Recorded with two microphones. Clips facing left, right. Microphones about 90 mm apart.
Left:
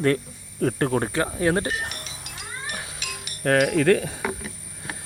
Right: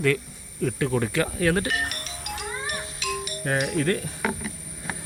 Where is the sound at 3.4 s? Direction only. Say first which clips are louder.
Left 7 dB; 60° left (ahead or behind); by 4.1 s 90° left.